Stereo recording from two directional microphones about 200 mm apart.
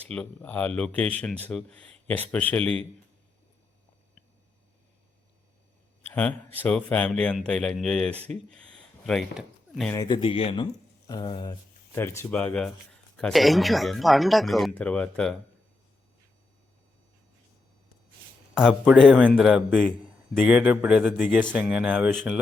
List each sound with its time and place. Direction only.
0.1 s speech: 5° left (ahead or behind)
6.1 s speech: 10° left (ahead or behind)
8.3 s a sound: 5° left (ahead or behind)
9.9 s speech: 20° left (ahead or behind)
11.9 s speech: 10° left (ahead or behind)
18.5 s speech: centre (ahead or behind)